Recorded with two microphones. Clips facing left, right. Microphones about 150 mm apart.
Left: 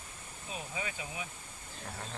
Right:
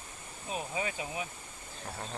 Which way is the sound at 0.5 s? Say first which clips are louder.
Right 5 dB; 30° right (ahead or behind).